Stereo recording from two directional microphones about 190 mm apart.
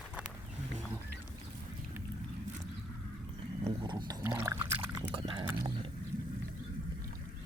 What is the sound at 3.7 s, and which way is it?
Pour, 25° right (ahead or behind).